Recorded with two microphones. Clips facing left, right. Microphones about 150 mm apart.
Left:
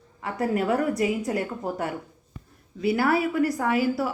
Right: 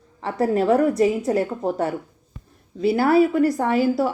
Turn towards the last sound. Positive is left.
turn(degrees=-30)  # may be behind; listen again after turning